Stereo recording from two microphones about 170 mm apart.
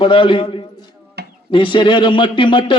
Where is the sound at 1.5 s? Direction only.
30° left (ahead or behind).